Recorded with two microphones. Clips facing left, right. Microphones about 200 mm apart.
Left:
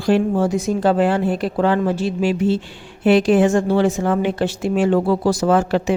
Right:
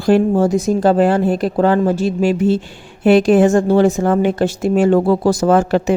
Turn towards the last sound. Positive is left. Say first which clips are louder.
# right 3 dB
turn(degrees=-45)  # may be behind; listen again after turning